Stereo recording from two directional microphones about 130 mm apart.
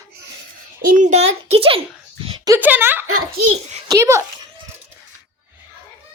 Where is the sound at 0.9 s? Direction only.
70° right (ahead or behind); by 1.8 s 45° right (ahead or behind).